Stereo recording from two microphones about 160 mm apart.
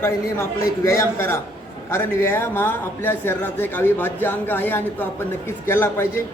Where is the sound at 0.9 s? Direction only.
15° left (ahead or behind).